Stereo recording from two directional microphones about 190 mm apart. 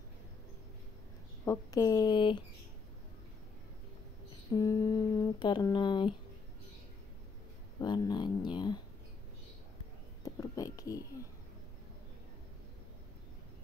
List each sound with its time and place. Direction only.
1.4 s speech: 15° left (ahead or behind)
4.6 s speech: 20° left (ahead or behind)
7.8 s speech: 20° left (ahead or behind)
10.2 s a sound: 20° left (ahead or behind)